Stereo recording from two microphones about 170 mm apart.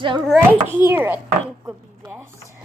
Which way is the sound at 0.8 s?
10° right (ahead or behind).